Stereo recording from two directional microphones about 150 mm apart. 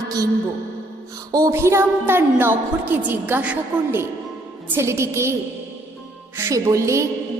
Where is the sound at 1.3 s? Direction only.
20° right (ahead or behind).